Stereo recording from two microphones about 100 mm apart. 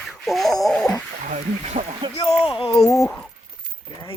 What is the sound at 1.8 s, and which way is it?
Speech, 90° right.